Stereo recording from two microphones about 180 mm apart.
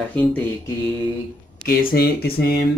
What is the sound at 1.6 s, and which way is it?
Speech, 60° left (ahead or behind).